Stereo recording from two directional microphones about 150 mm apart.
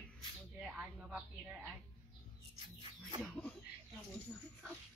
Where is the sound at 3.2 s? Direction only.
5° left (ahead or behind).